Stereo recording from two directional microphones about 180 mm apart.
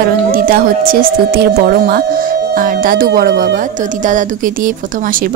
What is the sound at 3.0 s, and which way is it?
Speech, 65° right (ahead or behind).